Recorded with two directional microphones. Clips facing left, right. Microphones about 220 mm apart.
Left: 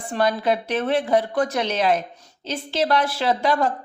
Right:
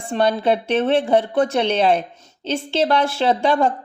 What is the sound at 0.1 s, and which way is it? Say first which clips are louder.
A woman's voice: right 3 dB; 25° right (ahead or behind).